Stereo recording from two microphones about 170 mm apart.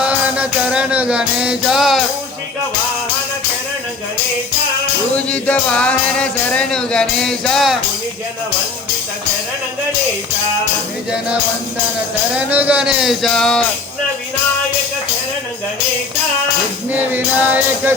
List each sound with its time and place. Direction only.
0.0 s music: 5° right (ahead or behind)
5.1 s music: 5° left (ahead or behind)
12.3 s music: 10° right (ahead or behind)
16.9 s music: 10° right (ahead or behind)